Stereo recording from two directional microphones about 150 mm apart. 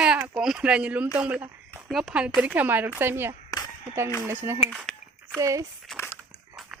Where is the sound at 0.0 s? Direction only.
5° right (ahead or behind).